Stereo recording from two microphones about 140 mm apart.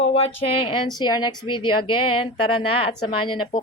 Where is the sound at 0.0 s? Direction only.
45° left (ahead or behind).